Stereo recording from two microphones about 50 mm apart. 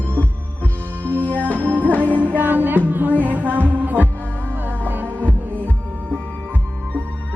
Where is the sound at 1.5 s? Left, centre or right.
Right.